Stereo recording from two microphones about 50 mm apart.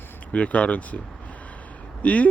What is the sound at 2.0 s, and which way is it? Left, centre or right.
Speech, left.